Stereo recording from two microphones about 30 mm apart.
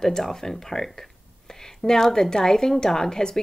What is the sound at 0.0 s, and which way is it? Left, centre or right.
Speech, centre.